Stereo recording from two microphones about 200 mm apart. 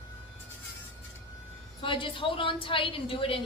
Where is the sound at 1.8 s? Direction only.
25° left (ahead or behind).